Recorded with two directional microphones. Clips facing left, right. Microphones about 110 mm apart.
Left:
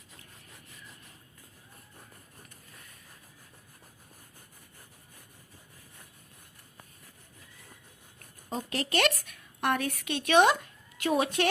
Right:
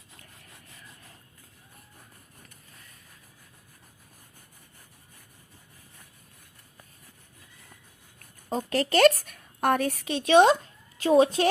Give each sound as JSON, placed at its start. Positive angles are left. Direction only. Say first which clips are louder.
{"t": 8.4, "sound": "a woman's voice", "louder": "right 6 dB", "side_deg": -40}